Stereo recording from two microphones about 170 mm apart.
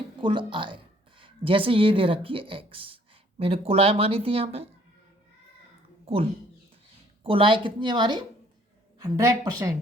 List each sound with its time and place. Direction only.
0.2 s a woman's voice: 30° right (ahead or behind)
7.3 s speech: 30° right (ahead or behind)